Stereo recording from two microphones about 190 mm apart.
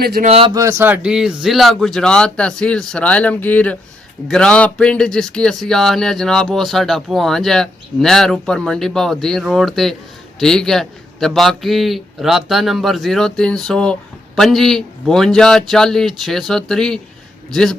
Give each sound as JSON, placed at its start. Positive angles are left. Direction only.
{"t": 0.0, "sound": "speech", "side_deg": -55}
{"t": 0.3, "sound": "speech", "side_deg": -30}
{"t": 0.5, "sound": "speech", "side_deg": -15}